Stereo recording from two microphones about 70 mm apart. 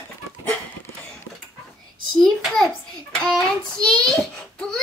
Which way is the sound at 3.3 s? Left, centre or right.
Centre.